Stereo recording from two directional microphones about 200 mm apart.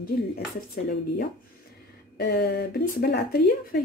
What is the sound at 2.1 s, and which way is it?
Speech, 55° left (ahead or behind).